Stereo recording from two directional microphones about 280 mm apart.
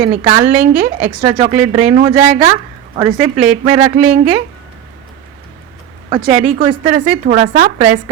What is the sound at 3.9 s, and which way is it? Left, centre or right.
Speech, right.